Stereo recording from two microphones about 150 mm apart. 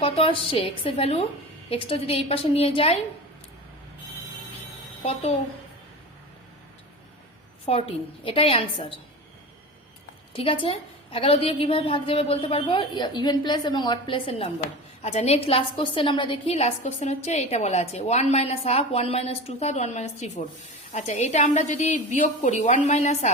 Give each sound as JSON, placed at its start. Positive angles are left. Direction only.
{"t": 0.0, "sound": "a woman's voice", "side_deg": 40}
{"t": 5.0, "sound": "a woman's voice", "side_deg": 45}
{"t": 7.6, "sound": "a woman's voice", "side_deg": 40}
{"t": 10.3, "sound": "a woman's voice", "side_deg": 35}